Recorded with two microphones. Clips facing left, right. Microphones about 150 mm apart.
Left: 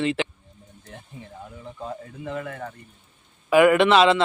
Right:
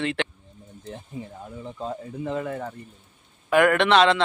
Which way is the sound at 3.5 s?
5° left (ahead or behind).